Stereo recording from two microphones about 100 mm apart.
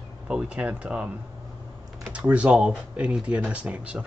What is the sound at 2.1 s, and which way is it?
A man's voice, 10° right (ahead or behind).